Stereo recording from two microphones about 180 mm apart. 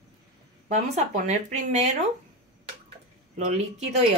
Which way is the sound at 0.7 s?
40° right (ahead or behind).